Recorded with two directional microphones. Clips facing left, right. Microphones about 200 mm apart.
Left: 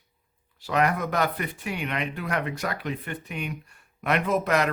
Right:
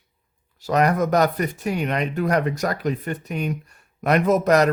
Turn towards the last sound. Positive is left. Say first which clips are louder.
# right 7 dB
turn(degrees=-40)  # may be behind; listen again after turning